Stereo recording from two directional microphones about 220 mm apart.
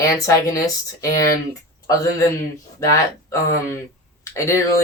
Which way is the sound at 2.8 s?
15° left (ahead or behind).